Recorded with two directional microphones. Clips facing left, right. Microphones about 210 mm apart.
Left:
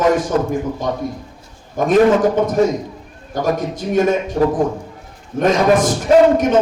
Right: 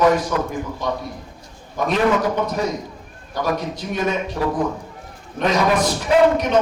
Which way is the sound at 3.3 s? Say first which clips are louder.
Left 4 dB; 45° left (ahead or behind).